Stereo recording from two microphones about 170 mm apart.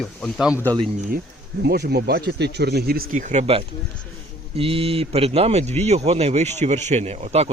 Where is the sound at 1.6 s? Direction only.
70° right (ahead or behind); by 3.4 s 45° right (ahead or behind).